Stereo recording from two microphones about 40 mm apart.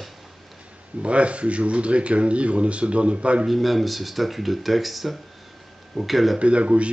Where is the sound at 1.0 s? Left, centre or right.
Right.